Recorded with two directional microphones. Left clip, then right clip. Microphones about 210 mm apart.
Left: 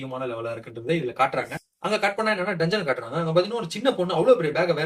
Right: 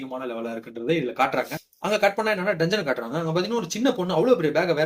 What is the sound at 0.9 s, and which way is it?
Speech, 50° right (ahead or behind).